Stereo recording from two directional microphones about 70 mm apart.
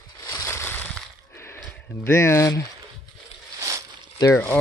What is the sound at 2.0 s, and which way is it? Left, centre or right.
Speech, left.